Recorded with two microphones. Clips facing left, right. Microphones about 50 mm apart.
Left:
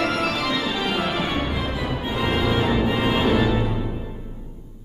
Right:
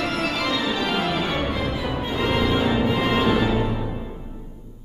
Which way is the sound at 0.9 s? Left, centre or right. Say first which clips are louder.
Even; centre.